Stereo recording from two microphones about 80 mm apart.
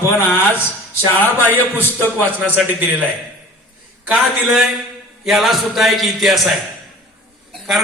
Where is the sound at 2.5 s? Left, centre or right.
Right.